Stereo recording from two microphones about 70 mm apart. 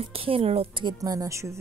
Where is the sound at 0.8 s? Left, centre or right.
Right.